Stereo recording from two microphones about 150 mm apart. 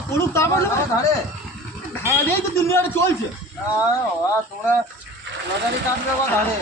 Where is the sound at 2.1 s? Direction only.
15° left (ahead or behind).